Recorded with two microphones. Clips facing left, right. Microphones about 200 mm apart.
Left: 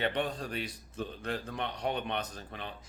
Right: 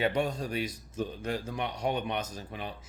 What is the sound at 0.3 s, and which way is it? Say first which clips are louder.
Speech: right 4 dB; 10° right (ahead or behind).